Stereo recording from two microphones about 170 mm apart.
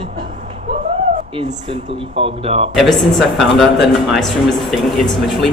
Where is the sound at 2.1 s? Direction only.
35° right (ahead or behind).